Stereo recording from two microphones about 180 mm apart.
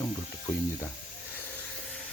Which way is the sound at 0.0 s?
20° left (ahead or behind).